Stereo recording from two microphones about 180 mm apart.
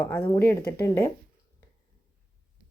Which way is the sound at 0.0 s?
10° left (ahead or behind).